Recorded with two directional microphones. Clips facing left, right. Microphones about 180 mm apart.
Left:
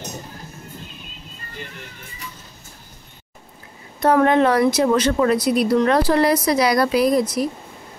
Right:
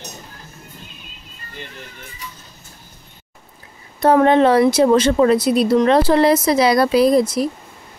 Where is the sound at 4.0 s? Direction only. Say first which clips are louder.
Right 3 dB; 30° right (ahead or behind).